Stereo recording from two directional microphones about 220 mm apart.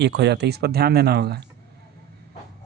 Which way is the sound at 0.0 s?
50° right (ahead or behind).